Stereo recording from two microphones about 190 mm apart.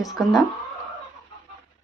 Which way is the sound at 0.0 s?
Centre (ahead or behind).